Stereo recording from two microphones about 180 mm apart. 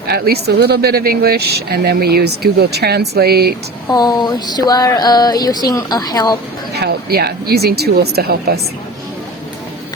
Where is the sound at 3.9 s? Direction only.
20° left (ahead or behind).